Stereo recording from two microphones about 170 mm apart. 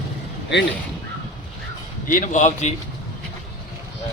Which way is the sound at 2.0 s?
50° left (ahead or behind).